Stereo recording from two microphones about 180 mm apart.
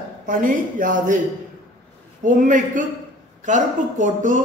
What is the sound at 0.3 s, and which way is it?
Speech, 50° right (ahead or behind).